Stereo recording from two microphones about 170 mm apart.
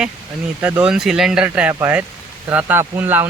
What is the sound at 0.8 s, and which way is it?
Speech, 5° right (ahead or behind).